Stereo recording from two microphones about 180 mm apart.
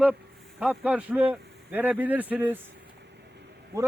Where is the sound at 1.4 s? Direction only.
70° right (ahead or behind).